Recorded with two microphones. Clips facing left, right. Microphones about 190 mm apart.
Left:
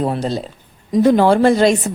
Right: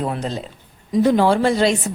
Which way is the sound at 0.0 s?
35° left (ahead or behind).